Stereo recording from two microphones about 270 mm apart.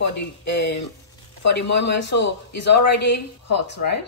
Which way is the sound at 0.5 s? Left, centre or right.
Left.